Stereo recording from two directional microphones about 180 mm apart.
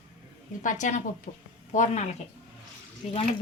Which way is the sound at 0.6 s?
45° left (ahead or behind).